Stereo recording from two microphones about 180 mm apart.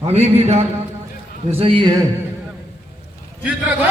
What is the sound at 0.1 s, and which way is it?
A man's voice, 35° right (ahead or behind).